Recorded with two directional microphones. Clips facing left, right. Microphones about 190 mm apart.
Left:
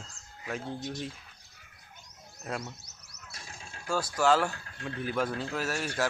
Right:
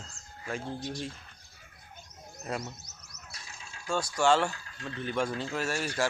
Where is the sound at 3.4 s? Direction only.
50° left (ahead or behind).